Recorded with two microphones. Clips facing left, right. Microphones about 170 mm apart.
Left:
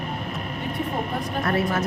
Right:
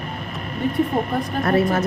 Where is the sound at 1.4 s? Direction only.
40° right (ahead or behind).